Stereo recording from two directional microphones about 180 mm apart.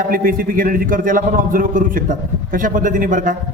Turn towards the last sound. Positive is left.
turn(degrees=-50)  # may be behind; listen again after turning